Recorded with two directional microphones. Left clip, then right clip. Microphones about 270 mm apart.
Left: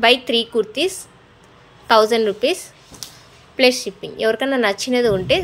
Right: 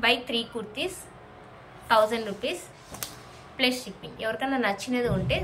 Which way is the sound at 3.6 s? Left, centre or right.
Centre.